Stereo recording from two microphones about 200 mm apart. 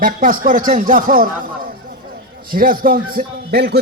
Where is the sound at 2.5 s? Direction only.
45° right (ahead or behind).